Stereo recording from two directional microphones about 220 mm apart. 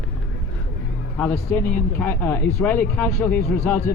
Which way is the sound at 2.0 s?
10° left (ahead or behind).